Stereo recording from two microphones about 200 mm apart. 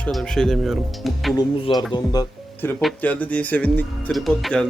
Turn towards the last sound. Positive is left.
turn(degrees=0)  # may be behind; listen again after turning